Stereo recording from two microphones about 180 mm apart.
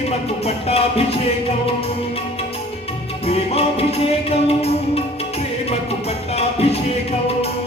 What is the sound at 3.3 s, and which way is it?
Music, 35° left (ahead or behind).